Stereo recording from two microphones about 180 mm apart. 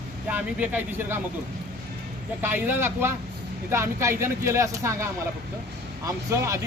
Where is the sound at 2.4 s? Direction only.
10° right (ahead or behind).